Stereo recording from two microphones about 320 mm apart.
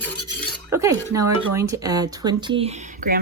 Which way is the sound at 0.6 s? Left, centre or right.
Centre.